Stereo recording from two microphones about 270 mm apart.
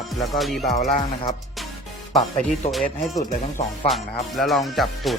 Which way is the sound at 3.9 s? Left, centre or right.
Centre.